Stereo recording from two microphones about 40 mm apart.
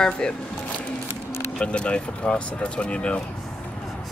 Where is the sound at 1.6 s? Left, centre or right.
Left.